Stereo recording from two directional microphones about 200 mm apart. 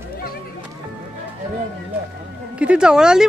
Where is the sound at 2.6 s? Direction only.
5° right (ahead or behind).